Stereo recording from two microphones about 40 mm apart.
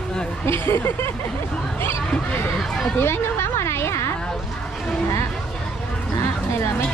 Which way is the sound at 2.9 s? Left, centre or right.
Left.